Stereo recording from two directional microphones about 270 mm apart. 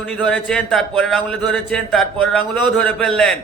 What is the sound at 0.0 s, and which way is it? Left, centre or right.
Speech, centre.